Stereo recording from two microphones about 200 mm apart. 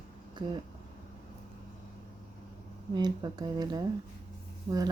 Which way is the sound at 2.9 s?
20° right (ahead or behind).